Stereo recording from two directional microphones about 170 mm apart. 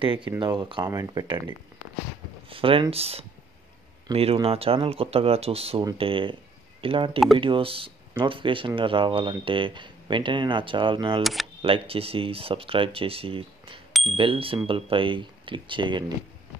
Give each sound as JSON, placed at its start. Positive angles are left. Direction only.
{"t": 0.0, "sound": "speech", "side_deg": -30}
{"t": 2.5, "sound": "speech", "side_deg": -30}